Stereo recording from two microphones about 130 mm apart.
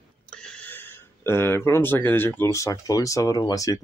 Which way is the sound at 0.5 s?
10° left (ahead or behind).